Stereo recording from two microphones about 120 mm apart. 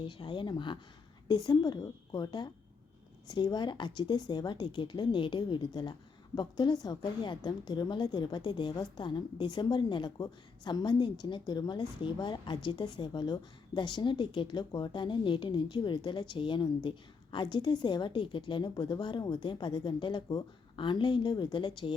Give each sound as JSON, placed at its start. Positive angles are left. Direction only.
{"t": 0.0, "sound": "speech", "side_deg": 45}